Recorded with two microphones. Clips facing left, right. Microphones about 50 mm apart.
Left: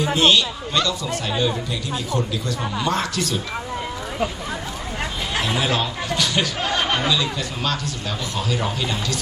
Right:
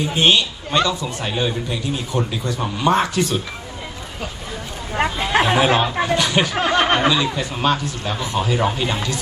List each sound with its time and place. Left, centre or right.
0.2 s speech: right
4.9 s chatter: right
6.6 s speech: right
7.3 s speech: right